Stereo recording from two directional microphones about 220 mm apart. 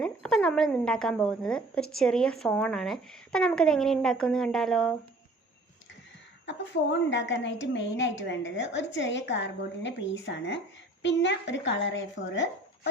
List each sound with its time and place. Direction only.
0.0 s a woman's voice: 5° left (ahead or behind)
6.4 s a woman's voice: 55° left (ahead or behind)